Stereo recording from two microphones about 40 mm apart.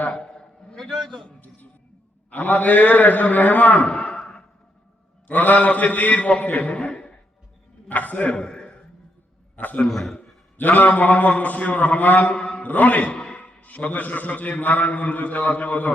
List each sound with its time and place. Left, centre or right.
0.2 s a sound: left
2.3 s a man's voice: left
3.8 s a sound: left
5.3 s a man's voice: left
7.9 s a man's voice: left
8.4 s a sound: left
9.6 s a man's voice: left
9.9 s a man's voice: centre
10.6 s a man's voice: left
12.6 s a man's voice: left